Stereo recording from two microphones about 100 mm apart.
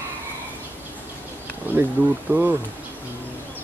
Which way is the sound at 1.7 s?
20° right (ahead or behind).